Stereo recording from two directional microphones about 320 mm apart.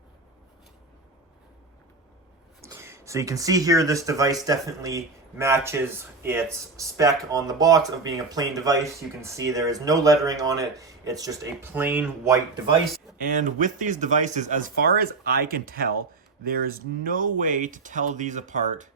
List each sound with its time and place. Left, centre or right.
2.6 s speech: centre
13.1 s speech: right